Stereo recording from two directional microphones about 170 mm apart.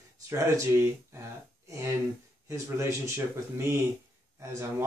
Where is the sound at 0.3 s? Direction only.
15° right (ahead or behind).